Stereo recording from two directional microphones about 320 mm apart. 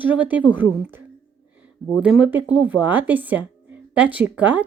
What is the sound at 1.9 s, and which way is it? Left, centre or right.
Speech, centre.